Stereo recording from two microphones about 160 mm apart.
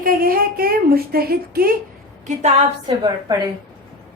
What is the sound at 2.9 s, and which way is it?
Speech, 25° right (ahead or behind).